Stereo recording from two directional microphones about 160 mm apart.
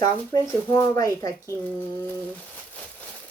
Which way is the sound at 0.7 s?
20° left (ahead or behind).